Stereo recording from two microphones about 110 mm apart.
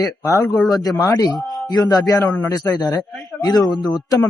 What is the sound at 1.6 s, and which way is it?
A man's voice, 35° left (ahead or behind).